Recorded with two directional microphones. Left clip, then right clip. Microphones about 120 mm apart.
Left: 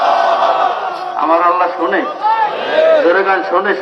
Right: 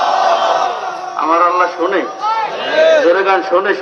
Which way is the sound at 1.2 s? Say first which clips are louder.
Even; 30° right (ahead or behind).